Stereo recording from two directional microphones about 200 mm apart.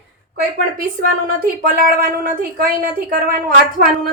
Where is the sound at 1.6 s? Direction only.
45° right (ahead or behind).